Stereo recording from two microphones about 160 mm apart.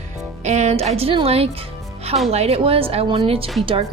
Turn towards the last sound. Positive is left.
turn(degrees=-35)  # may be behind; listen again after turning